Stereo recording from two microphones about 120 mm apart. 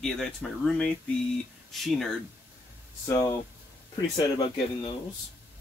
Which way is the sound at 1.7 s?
Centre (ahead or behind).